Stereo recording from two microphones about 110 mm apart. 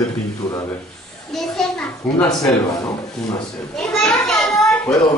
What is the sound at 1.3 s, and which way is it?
Speech, 5° left (ahead or behind).